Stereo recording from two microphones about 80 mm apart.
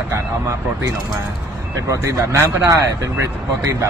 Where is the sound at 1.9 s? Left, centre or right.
Right.